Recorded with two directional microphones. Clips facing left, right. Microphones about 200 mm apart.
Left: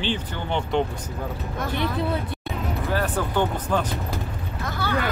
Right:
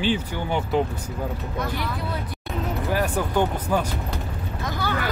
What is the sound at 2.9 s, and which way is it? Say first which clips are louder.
Speech: right 1 dB; 15° right (ahead or behind).